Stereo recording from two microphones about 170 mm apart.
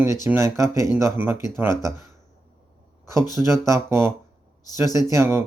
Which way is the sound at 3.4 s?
15° right (ahead or behind).